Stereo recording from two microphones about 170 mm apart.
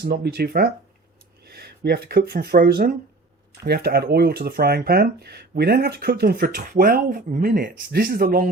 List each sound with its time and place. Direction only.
0.0 s speech: 65° right (ahead or behind)
7.5 s speech: 60° right (ahead or behind)